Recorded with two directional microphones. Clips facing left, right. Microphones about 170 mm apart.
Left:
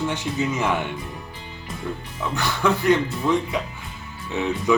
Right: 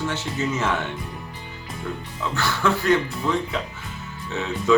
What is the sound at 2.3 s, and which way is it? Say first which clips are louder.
Speech: left 1 dB; 15° left (ahead or behind).